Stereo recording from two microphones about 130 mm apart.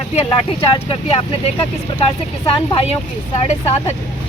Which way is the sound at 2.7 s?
50° left (ahead or behind).